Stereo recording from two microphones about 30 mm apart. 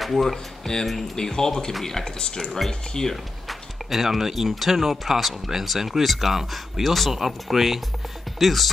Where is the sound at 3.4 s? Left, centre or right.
Centre.